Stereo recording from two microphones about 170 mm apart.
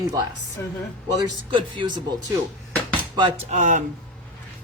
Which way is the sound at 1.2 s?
25° right (ahead or behind).